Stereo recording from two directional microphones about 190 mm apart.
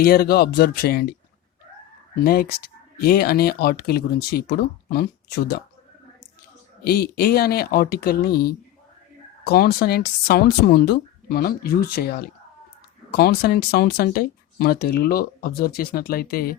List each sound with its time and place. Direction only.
0.0 s speech: 55° left (ahead or behind)
2.2 s speech: 50° left (ahead or behind)
6.8 s speech: 55° left (ahead or behind)